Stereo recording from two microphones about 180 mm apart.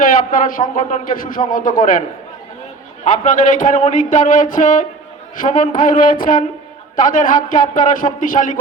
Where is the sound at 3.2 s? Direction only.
45° left (ahead or behind).